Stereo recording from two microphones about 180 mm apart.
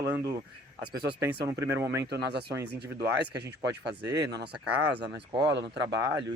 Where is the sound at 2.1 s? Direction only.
65° right (ahead or behind).